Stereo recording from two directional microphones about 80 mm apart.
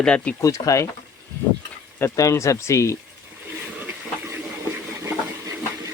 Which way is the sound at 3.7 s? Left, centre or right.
Right.